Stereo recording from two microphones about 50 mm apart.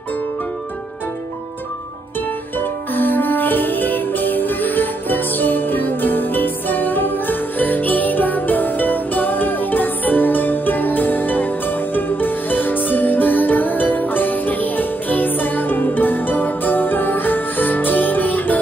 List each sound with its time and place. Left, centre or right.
2.6 s music: left